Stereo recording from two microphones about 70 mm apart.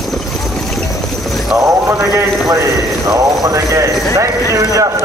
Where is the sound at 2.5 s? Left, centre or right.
Right.